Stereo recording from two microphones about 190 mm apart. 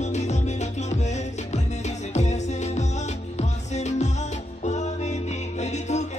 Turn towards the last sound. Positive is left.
turn(degrees=35)  # may be behind; listen again after turning